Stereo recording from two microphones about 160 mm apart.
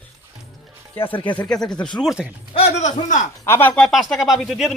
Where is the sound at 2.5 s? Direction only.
45° left (ahead or behind).